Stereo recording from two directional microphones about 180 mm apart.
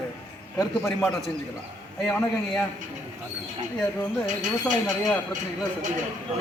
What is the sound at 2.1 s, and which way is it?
Speech, 10° left (ahead or behind).